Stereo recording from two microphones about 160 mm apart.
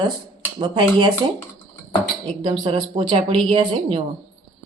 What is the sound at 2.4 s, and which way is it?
Speech, 30° right (ahead or behind).